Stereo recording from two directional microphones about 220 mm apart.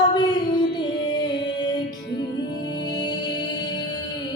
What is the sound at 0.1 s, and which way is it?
Music, 20° left (ahead or behind).